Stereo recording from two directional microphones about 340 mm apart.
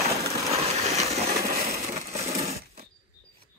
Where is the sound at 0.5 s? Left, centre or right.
Centre.